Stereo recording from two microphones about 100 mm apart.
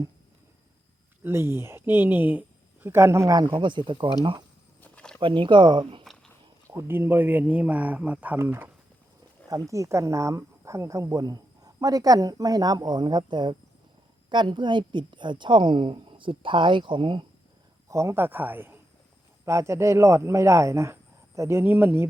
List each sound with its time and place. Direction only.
1.2 s a woman's voice: 25° right (ahead or behind); by 4.1 s 55° right (ahead or behind)
4.8 s a sound: 15° left (ahead or behind)
5.2 s a woman's voice: 55° right (ahead or behind)
6.7 s speech: 25° right (ahead or behind)
9.5 s a woman's voice: 35° right (ahead or behind); by 17.2 s 55° right (ahead or behind)
17.8 s speech: 30° right (ahead or behind)